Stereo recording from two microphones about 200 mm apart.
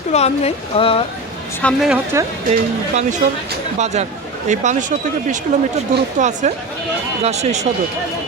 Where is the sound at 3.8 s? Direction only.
35° right (ahead or behind).